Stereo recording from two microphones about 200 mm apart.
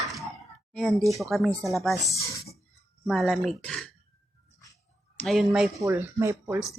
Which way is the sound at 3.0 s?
Centre (ahead or behind).